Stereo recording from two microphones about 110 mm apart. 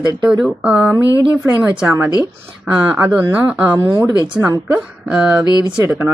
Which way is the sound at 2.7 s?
10° right (ahead or behind).